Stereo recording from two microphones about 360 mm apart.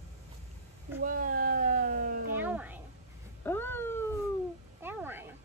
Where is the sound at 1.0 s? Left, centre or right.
Right.